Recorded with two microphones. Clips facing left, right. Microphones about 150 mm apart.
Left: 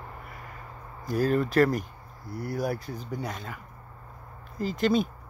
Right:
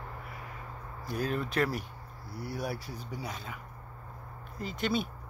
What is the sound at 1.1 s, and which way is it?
Speech, centre (ahead or behind).